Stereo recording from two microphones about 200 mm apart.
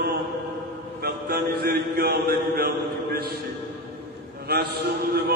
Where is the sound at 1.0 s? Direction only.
50° right (ahead or behind).